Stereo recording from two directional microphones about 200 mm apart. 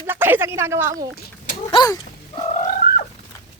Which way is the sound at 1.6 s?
20° left (ahead or behind).